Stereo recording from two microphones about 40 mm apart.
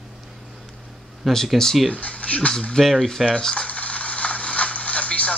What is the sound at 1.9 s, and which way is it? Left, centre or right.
Speech, left.